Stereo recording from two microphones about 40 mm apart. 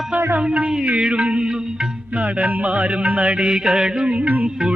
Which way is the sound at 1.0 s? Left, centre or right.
Right.